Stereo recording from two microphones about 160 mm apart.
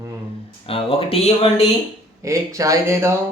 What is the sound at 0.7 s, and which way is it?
Speech, 35° left (ahead or behind).